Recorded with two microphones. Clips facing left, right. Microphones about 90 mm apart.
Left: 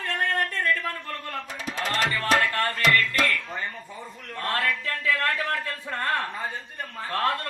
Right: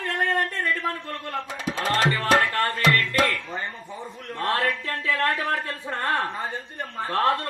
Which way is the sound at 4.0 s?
25° right (ahead or behind).